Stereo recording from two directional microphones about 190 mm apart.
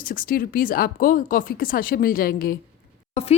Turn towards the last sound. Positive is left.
turn(degrees=35)  # may be behind; listen again after turning